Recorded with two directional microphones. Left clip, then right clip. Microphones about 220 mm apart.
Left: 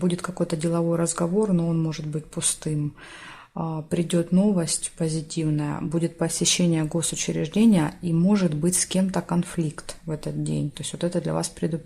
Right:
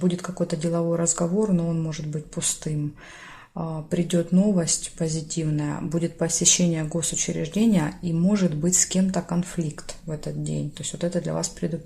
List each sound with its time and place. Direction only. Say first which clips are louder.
0.0 s speech: even; 25° left (ahead or behind)